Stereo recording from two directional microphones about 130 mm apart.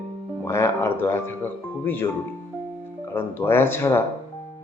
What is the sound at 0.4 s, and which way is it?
A man's voice, 20° left (ahead or behind).